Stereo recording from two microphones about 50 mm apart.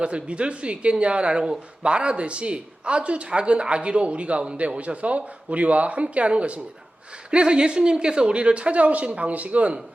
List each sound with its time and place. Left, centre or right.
0.0 s speech: right